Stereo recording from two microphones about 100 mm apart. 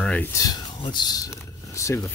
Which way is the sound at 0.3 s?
35° left (ahead or behind).